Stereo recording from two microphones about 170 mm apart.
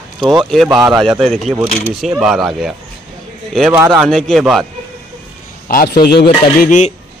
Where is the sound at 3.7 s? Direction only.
15° right (ahead or behind).